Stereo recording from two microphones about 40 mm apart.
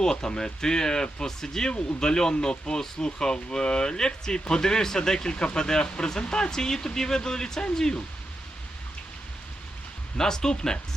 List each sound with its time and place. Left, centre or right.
0.0 s speech: centre
10.2 s speech: centre